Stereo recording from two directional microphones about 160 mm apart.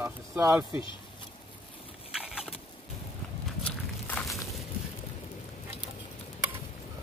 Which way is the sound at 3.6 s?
5° left (ahead or behind).